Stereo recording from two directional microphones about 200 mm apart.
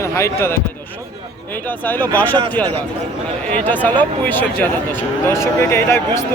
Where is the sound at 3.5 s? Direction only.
10° left (ahead or behind).